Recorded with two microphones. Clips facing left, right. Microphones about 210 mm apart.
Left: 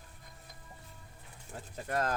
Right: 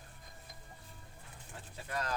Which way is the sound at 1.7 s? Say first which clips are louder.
Left 6 dB; 50° left (ahead or behind).